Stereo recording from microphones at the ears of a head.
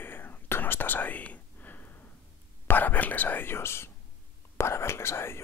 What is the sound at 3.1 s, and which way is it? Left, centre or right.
Whispering, left.